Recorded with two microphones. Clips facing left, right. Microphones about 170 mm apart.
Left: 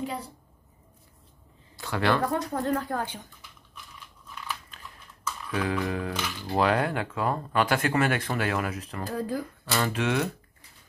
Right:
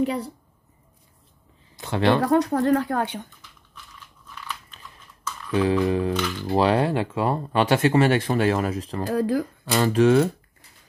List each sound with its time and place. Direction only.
1.8 s speech: 25° right (ahead or behind)
2.2 s speech: 75° right (ahead or behind)
5.5 s speech: 25° right (ahead or behind)
9.1 s speech: 90° right
9.7 s speech: 35° right (ahead or behind)